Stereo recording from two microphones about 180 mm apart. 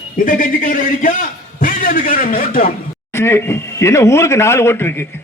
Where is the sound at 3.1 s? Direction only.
15° left (ahead or behind).